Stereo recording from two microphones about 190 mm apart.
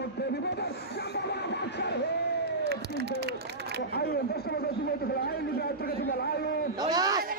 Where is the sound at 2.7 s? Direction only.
60° right (ahead or behind).